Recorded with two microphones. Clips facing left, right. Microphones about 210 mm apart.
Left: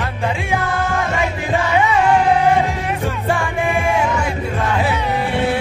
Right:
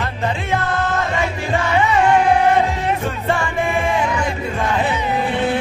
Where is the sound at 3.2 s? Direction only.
15° left (ahead or behind).